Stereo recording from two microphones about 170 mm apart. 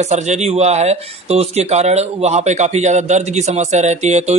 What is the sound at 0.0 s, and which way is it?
Speech, 40° right (ahead or behind).